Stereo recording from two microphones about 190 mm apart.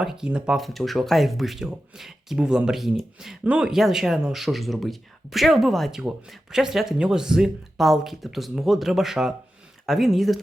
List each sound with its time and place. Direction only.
0.0 s speech: 5° right (ahead or behind)